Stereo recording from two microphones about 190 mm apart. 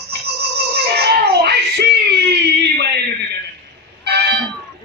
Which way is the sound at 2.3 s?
60° right (ahead or behind).